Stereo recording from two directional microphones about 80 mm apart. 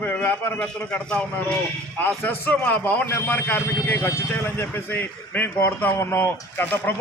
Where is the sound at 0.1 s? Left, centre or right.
Left.